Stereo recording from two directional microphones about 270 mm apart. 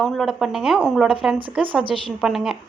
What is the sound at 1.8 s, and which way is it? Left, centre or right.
Speech, centre.